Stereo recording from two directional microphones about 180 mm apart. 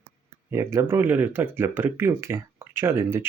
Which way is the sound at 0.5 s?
15° right (ahead or behind).